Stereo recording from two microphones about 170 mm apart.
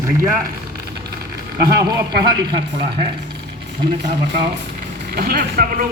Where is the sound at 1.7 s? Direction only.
20° right (ahead or behind).